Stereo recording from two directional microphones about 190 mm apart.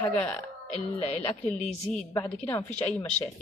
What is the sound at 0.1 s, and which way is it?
A woman's voice, 5° left (ahead or behind).